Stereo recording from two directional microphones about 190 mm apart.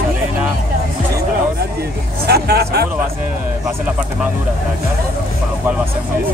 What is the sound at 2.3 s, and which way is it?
Vehicle, 55° right (ahead or behind).